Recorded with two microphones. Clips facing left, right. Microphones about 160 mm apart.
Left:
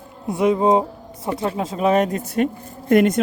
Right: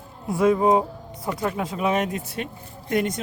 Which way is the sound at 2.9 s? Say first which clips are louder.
Left 9 dB; 55° left (ahead or behind).